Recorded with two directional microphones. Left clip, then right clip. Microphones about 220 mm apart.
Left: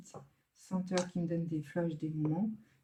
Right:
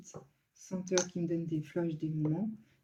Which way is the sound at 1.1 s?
45° left (ahead or behind).